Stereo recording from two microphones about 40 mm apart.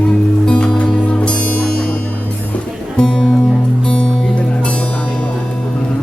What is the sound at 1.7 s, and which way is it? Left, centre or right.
Music, centre.